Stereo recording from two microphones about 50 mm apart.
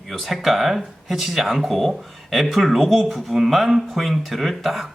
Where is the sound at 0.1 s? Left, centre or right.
Centre.